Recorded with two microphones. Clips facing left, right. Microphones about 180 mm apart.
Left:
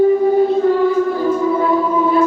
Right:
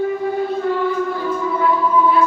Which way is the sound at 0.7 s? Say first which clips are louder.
Left 5 dB; 40° left (ahead or behind).